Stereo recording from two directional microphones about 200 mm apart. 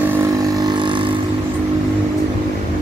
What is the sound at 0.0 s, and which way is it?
Vehicle, 15° right (ahead or behind).